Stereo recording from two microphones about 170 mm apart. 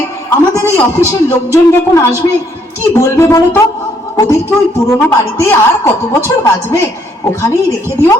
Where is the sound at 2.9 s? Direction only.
15° left (ahead or behind).